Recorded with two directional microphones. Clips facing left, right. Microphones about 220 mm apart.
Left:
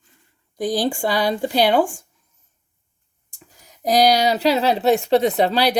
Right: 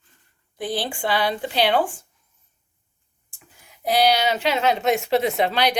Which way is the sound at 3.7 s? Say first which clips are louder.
Left 3 dB; 40° left (ahead or behind).